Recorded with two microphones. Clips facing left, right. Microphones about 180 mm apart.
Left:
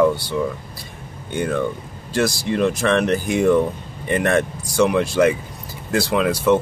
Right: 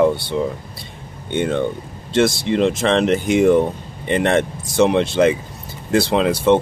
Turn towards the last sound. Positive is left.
turn(degrees=-25)  # may be behind; listen again after turning